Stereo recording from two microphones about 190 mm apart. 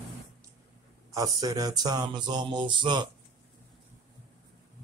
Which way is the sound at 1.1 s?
20° right (ahead or behind).